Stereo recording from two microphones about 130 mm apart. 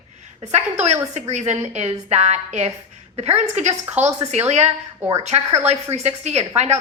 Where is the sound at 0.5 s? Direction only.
60° right (ahead or behind).